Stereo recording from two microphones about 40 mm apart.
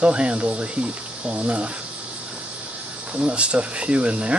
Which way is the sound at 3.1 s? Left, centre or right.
Right.